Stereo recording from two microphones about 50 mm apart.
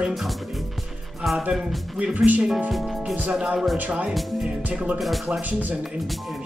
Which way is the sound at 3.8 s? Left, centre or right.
Right.